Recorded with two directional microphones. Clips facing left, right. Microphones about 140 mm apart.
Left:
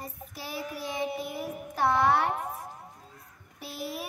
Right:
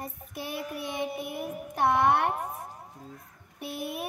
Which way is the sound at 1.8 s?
20° right (ahead or behind).